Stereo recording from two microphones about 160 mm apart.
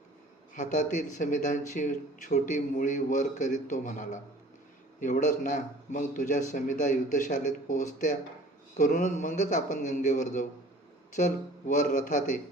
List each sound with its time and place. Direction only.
0.5 s speech: 50° left (ahead or behind)